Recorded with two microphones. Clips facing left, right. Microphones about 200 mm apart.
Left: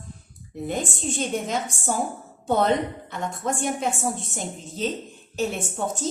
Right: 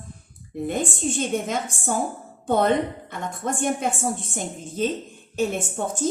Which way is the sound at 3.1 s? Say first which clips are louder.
Even; 55° right (ahead or behind).